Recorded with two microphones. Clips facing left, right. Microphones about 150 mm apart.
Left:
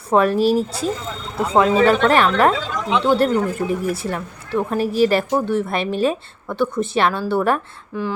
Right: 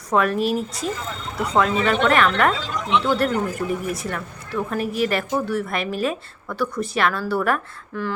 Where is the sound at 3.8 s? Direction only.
30° left (ahead or behind).